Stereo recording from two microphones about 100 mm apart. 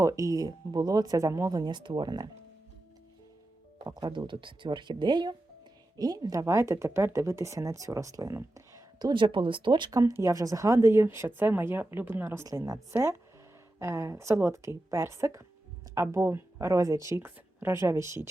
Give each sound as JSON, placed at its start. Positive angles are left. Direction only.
{"t": 0.0, "sound": "speech", "side_deg": -35}
{"t": 3.8, "sound": "speech", "side_deg": -45}
{"t": 9.0, "sound": "speech", "side_deg": -45}
{"t": 9.9, "sound": "speech", "side_deg": -30}